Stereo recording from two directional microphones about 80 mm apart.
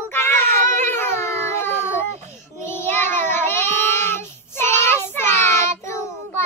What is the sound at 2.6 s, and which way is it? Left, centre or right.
Child singing, left.